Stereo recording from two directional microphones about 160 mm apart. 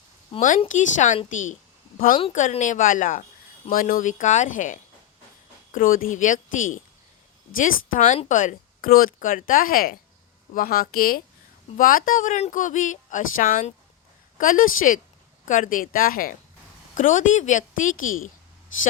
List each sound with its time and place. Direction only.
0.3 s a woman's voice: 55° left (ahead or behind)
16.9 s a woman's voice: 55° left (ahead or behind)